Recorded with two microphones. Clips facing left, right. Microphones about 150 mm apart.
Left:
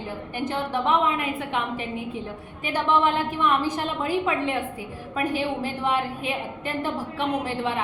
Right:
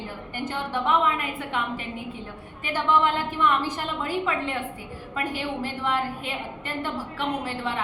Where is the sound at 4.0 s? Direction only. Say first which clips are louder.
Left 3 dB; 15° left (ahead or behind).